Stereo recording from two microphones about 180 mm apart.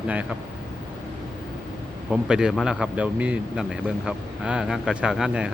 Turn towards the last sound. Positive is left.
turn(degrees=-5)  # may be behind; listen again after turning